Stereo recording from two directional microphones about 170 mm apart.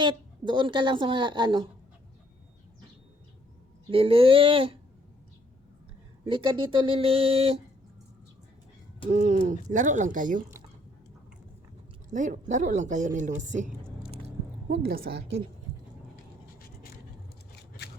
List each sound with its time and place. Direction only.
0.0 s a woman's voice: 30° right (ahead or behind)
3.8 s speech: 35° right (ahead or behind)
6.2 s speech: 30° right (ahead or behind)
9.1 s speech: 45° right (ahead or behind)
12.1 s speech: 45° right (ahead or behind)
14.7 s a woman's voice: 65° right (ahead or behind)